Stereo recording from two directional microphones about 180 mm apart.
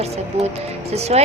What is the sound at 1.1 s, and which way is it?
Speech, 35° right (ahead or behind).